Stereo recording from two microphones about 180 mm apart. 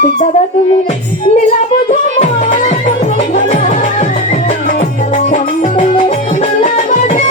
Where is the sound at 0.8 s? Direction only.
40° left (ahead or behind).